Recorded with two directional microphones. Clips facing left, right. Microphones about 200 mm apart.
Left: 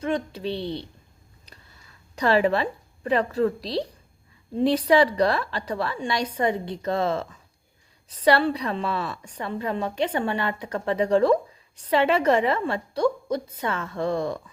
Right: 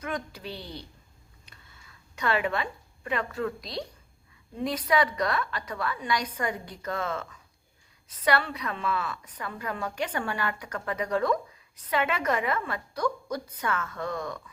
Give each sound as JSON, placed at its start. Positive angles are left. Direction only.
{"t": 0.0, "sound": "a woman's voice", "side_deg": 25}
{"t": 1.5, "sound": "a woman's voice", "side_deg": 35}